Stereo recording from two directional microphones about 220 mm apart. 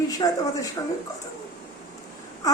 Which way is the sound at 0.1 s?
15° left (ahead or behind).